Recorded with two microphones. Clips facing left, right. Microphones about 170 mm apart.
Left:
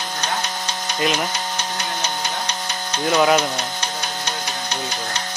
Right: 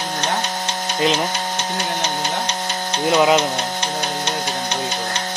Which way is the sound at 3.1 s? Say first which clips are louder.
Right 1 dB; 20° right (ahead or behind).